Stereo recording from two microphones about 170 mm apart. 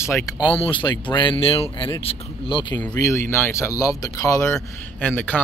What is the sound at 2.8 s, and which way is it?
Speech, 15° left (ahead or behind).